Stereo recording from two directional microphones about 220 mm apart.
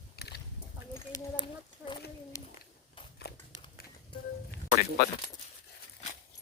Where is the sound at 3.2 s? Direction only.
45° left (ahead or behind).